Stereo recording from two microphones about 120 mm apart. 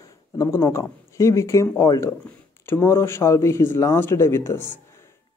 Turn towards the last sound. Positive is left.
turn(degrees=20)  # may be behind; listen again after turning